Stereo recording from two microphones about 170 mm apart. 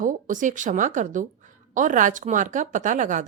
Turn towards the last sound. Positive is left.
turn(degrees=-50)  # may be behind; listen again after turning